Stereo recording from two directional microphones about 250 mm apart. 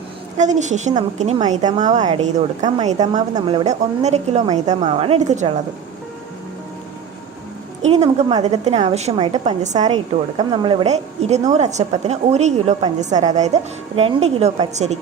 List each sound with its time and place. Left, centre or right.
0.6 s a woman's voice: right
7.8 s a woman's voice: right